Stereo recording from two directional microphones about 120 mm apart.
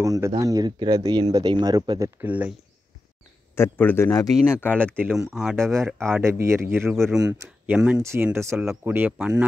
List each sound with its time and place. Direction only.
0.0 s speech: 25° right (ahead or behind)
2.2 s speech: 15° right (ahead or behind)
3.5 s speech: 20° left (ahead or behind)
5.1 s speech: 5° right (ahead or behind)
5.6 s speech: 25° right (ahead or behind)
7.2 s speech: 30° right (ahead or behind)
7.6 s speech: 10° right (ahead or behind)
8.0 s speech: 20° right (ahead or behind)